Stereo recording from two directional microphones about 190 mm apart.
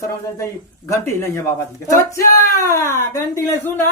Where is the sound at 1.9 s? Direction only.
15° left (ahead or behind).